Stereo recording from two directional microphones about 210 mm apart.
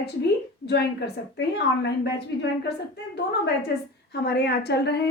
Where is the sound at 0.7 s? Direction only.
50° left (ahead or behind).